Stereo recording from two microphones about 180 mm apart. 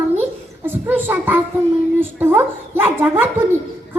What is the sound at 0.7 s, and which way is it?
Child singing, 10° right (ahead or behind).